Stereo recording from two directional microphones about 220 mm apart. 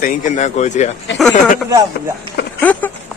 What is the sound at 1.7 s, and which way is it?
Speech, 15° right (ahead or behind).